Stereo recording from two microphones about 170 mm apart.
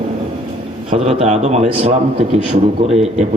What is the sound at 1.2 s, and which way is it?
Speech, 40° right (ahead or behind).